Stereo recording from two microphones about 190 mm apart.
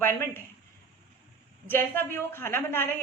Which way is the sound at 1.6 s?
10° left (ahead or behind).